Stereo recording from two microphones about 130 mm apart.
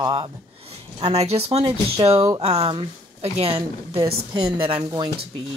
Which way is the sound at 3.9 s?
35° right (ahead or behind).